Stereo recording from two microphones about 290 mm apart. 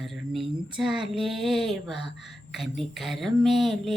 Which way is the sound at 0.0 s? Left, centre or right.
Centre.